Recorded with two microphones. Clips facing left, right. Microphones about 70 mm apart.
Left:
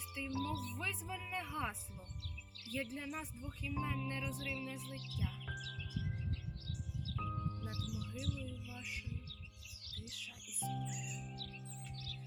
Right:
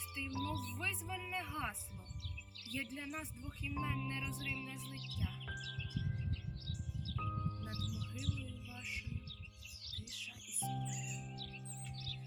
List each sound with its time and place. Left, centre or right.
0.1 s speech: centre
5.1 s music: centre
7.2 s music: centre
8.1 s speech: centre
10.2 s music: centre